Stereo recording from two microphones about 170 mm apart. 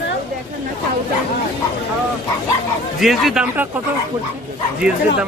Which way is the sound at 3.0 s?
Centre (ahead or behind).